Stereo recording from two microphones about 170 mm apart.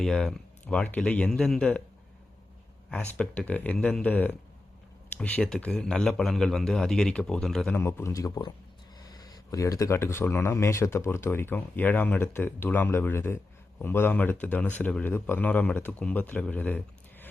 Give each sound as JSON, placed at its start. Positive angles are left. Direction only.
{"t": 0.0, "sound": "a man's voice", "side_deg": 5}
{"t": 2.9, "sound": "a man's voice", "side_deg": 5}
{"t": 7.8, "sound": "speech", "side_deg": 15}